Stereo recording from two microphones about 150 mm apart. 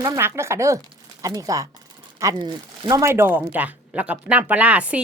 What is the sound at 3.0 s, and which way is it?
Speech, 15° right (ahead or behind).